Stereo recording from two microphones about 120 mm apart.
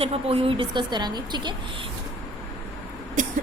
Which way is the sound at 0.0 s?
55° right (ahead or behind).